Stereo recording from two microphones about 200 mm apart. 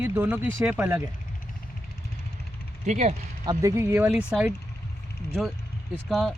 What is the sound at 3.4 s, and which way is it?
Speech, 15° right (ahead or behind).